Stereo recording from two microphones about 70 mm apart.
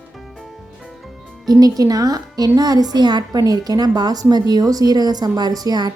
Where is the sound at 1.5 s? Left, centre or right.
Right.